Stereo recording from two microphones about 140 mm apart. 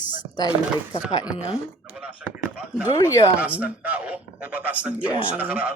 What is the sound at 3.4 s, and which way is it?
Speech, 10° right (ahead or behind).